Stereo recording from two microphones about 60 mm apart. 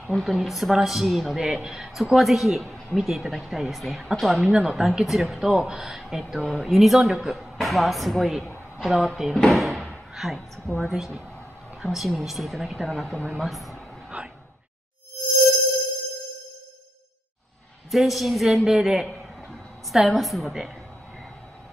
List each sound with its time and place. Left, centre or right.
0.1 s speech: centre
9.5 s door: centre
10.1 s a woman's voice: centre
14.1 s a sound: right
17.9 s speech: centre